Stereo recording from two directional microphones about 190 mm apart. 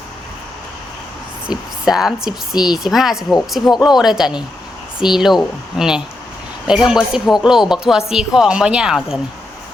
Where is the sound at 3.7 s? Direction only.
20° left (ahead or behind).